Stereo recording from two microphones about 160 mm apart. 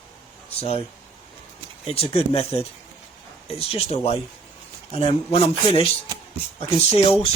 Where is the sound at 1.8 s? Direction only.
40° left (ahead or behind).